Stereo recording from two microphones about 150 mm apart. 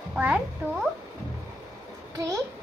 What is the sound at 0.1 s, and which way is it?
Speech, 10° right (ahead or behind).